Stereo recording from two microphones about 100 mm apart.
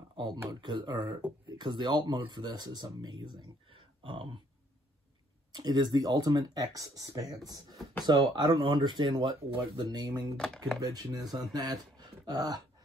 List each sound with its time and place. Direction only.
0.1 s a sound: 45° right (ahead or behind)
0.5 s speech: 50° right (ahead or behind)
5.5 s speech: 45° right (ahead or behind)
10.3 s speech: 5° left (ahead or behind)
10.8 s speech: 40° right (ahead or behind)